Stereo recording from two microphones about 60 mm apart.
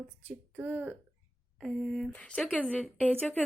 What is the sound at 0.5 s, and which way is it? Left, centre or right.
Speech, right.